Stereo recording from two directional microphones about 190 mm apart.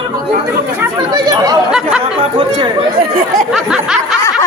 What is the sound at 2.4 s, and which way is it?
Speech, 25° right (ahead or behind).